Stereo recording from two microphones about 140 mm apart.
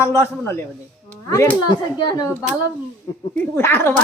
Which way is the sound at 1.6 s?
30° left (ahead or behind).